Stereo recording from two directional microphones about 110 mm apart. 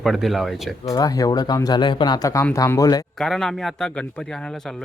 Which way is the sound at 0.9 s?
35° left (ahead or behind).